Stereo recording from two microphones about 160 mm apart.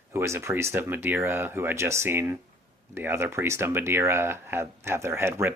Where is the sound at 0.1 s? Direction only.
15° right (ahead or behind).